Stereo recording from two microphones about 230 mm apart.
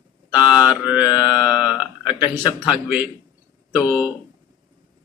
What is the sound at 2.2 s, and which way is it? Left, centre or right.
Speech, centre.